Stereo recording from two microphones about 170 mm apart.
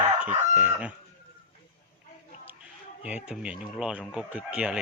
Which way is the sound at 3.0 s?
5° right (ahead or behind).